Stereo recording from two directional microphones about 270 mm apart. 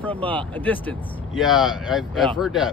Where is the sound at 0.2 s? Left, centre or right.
Centre.